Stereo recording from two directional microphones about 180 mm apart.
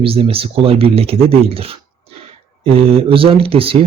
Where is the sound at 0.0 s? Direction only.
30° right (ahead or behind).